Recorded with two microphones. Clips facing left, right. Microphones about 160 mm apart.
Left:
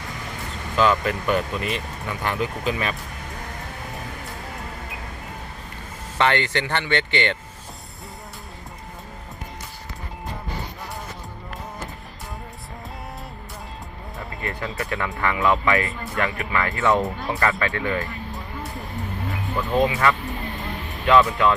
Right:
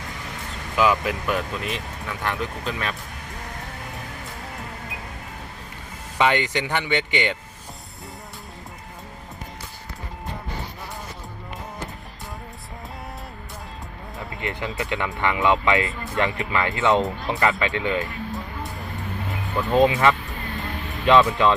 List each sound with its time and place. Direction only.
0.8 s speech: 5° right (ahead or behind)
6.1 s speech: 15° right (ahead or behind)
14.4 s speech: 20° right (ahead or behind)
19.7 s speech: 20° right (ahead or behind)